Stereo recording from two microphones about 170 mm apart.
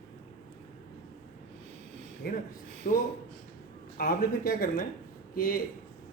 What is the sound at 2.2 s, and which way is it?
A man's voice, 60° left (ahead or behind).